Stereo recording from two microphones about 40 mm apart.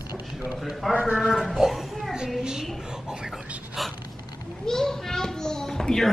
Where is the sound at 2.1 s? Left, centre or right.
Centre.